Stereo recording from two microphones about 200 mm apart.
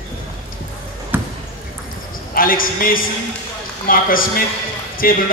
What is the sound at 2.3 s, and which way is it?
A man's voice, 45° left (ahead or behind).